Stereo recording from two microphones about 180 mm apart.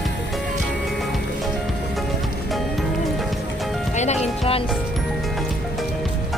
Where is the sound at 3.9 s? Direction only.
40° left (ahead or behind).